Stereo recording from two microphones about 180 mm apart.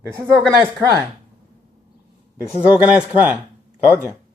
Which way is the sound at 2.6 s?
5° right (ahead or behind).